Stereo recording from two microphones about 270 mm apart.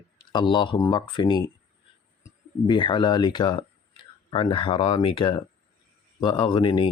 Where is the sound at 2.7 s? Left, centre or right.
Centre.